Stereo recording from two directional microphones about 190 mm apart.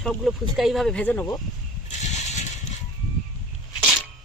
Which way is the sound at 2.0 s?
35° left (ahead or behind).